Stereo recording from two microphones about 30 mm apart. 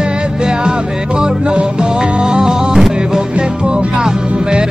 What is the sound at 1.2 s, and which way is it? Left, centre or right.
Music, right.